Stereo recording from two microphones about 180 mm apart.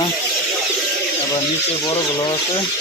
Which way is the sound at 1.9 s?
25° left (ahead or behind).